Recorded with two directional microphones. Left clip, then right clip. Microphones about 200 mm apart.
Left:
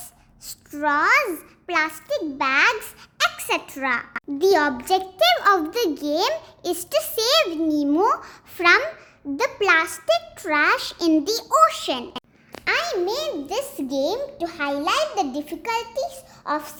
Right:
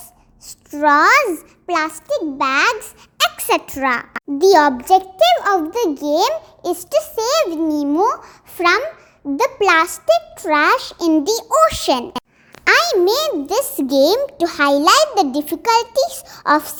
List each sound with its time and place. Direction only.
0.7 s a child's voice: 25° right (ahead or behind)